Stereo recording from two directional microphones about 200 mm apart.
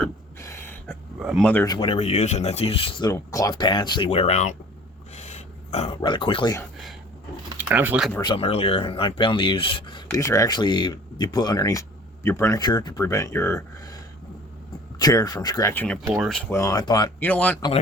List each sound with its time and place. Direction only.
0.3 s a sound: 15° left (ahead or behind)
0.9 s speech: centre (ahead or behind)
1.6 s speech: 25° left (ahead or behind)
5.1 s dog: 35° left (ahead or behind)
6.0 s speech: 25° left (ahead or behind)
7.6 s speech: 10° right (ahead or behind)
8.2 s speech: 25° left (ahead or behind); by 16.0 s 10° left (ahead or behind)
16.1 s speech: centre (ahead or behind)
16.5 s speech: 15° left (ahead or behind)
17.2 s speech: 5° left (ahead or behind)